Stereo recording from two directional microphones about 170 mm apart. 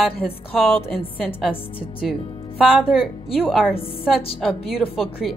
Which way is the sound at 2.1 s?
Centre (ahead or behind).